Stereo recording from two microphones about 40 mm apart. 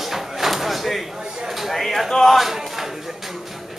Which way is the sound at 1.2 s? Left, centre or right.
Centre.